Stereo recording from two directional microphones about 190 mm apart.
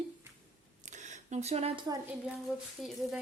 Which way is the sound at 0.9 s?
40° right (ahead or behind).